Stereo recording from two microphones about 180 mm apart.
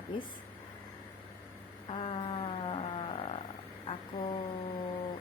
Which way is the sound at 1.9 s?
30° left (ahead or behind).